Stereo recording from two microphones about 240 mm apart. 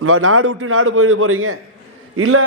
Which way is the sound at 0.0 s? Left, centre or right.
Right.